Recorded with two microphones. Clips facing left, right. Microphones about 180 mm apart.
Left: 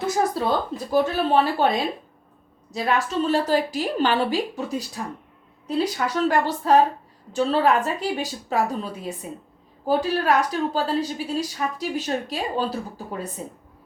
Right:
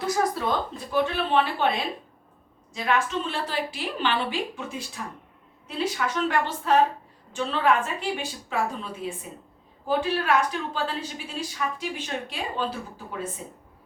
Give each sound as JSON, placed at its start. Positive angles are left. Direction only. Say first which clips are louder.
{"t": 0.3, "sound": "a woman's voice", "louder": "left 4 dB", "side_deg": 35}